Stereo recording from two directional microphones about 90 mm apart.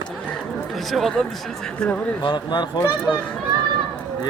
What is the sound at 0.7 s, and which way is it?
Speech, centre (ahead or behind).